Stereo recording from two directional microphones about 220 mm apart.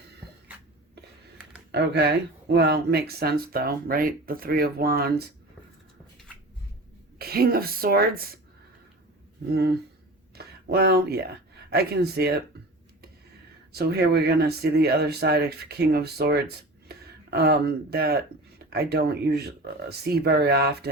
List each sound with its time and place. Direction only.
1.7 s speech: 50° right (ahead or behind)
7.2 s speech: 45° right (ahead or behind)
9.5 s speech: 45° right (ahead or behind)
13.7 s speech: 45° right (ahead or behind)